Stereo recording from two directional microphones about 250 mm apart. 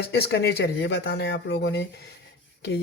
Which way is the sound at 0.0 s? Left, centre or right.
Left.